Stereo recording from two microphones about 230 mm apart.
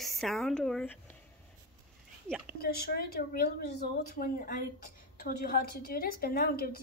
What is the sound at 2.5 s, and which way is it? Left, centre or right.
A woman's voice, left.